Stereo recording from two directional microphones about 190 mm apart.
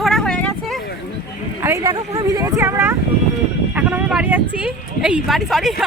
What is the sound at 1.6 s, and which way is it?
Speech, 15° right (ahead or behind).